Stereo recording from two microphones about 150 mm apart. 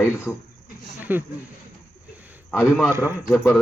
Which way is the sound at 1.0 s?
10° right (ahead or behind).